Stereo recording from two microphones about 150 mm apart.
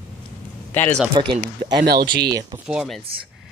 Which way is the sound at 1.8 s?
90° right.